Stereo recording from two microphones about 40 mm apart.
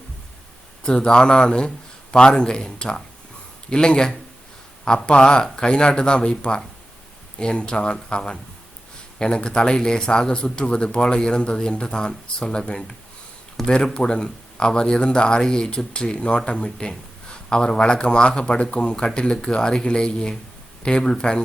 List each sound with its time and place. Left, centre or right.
0.9 s speech: left
13.6 s speech: centre
13.9 s speech: left